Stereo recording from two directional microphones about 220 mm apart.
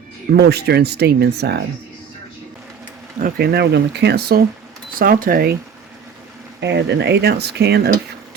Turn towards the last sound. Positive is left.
turn(degrees=-50)  # may be behind; listen again after turning